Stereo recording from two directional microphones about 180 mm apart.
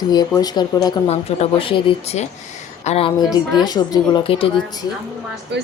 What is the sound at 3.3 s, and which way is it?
A woman's voice, 20° left (ahead or behind).